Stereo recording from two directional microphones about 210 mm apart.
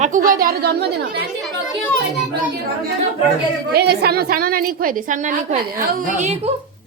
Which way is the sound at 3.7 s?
50° right (ahead or behind).